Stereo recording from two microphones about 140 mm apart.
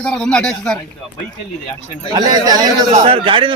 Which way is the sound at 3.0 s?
40° right (ahead or behind).